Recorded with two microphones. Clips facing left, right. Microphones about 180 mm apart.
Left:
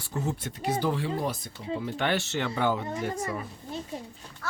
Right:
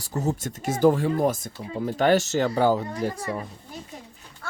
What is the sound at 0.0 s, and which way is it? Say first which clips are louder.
Speech: right 5 dB; 40° right (ahead or behind).